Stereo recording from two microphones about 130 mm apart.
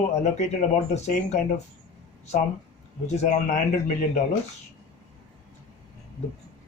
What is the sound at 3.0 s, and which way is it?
Speech, 60° left (ahead or behind).